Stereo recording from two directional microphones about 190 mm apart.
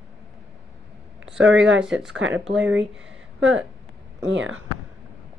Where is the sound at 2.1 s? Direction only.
90° right.